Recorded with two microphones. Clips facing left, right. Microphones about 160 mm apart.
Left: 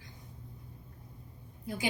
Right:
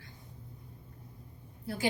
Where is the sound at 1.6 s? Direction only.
15° left (ahead or behind).